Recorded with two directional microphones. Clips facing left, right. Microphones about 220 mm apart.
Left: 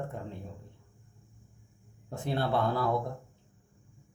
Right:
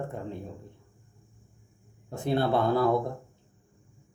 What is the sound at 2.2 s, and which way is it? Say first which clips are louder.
Speech: right 4 dB; 10° right (ahead or behind).